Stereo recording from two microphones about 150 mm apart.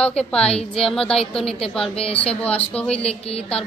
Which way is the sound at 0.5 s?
40° left (ahead or behind).